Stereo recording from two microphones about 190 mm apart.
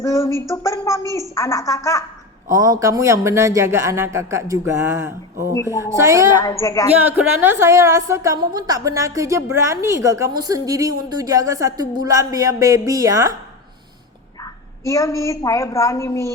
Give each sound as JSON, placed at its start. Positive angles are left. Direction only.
{"t": 0.0, "sound": "speech", "side_deg": 15}
{"t": 2.6, "sound": "a woman's voice", "side_deg": -20}
{"t": 6.3, "sound": "speech", "side_deg": 20}
{"t": 7.0, "sound": "a woman's voice", "side_deg": -10}
{"t": 14.4, "sound": "a woman's voice", "side_deg": 15}